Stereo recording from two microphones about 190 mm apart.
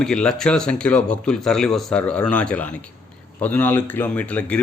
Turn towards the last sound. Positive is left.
turn(degrees=5)  # may be behind; listen again after turning